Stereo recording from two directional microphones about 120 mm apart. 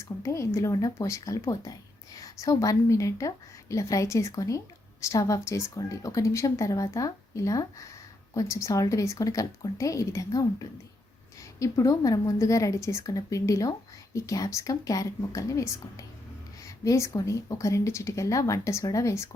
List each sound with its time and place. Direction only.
0.0 s a woman's voice: 25° left (ahead or behind)
16.6 s a sound: 25° left (ahead or behind)
17.1 s a woman's voice: 30° left (ahead or behind)